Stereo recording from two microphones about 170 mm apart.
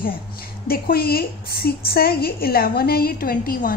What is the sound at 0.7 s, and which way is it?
A woman's voice, 60° left (ahead or behind).